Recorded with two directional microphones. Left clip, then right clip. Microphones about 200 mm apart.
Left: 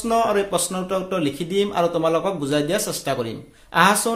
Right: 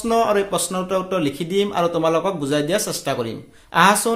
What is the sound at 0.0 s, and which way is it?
A man's voice, 10° right (ahead or behind).